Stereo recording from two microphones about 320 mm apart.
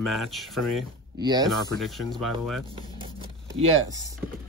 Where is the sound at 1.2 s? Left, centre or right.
Centre.